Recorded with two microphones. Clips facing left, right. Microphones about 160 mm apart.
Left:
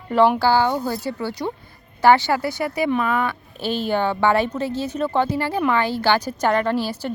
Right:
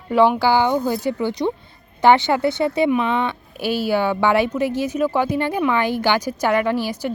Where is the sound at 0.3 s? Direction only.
15° right (ahead or behind).